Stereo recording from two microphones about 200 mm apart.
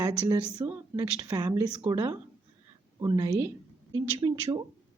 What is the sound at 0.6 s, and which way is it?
A woman's voice, 15° right (ahead or behind).